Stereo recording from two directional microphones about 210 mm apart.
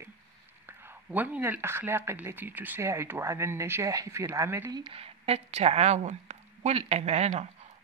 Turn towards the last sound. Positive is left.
turn(degrees=-30)  # may be behind; listen again after turning